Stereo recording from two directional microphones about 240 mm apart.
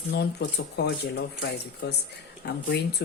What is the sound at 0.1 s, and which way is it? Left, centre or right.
Speech, left.